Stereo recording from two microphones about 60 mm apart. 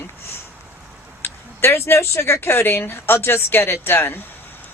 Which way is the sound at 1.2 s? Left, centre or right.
Left.